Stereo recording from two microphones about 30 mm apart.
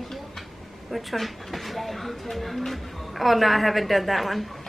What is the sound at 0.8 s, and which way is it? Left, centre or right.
Speech, centre.